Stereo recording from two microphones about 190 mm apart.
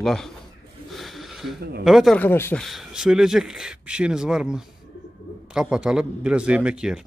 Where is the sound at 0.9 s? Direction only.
Centre (ahead or behind).